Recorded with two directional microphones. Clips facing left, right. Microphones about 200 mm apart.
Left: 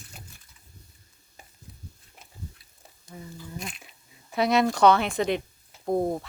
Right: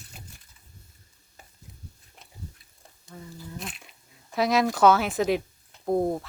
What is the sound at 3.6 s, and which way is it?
Dog, centre (ahead or behind).